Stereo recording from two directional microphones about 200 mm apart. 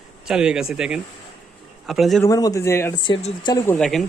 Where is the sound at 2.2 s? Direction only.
15° left (ahead or behind).